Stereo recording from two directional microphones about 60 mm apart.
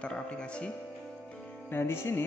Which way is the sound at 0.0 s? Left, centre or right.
Centre.